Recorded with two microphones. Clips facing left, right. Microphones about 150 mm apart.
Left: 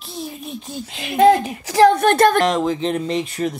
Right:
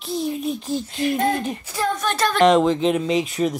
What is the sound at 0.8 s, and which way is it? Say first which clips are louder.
A woman's voice: left 9 dB; 90° left.